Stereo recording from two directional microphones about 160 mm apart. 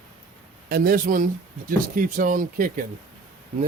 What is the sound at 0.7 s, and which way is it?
Speech, 65° right (ahead or behind).